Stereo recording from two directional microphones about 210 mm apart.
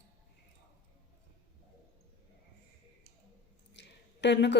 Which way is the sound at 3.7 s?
55° left (ahead or behind).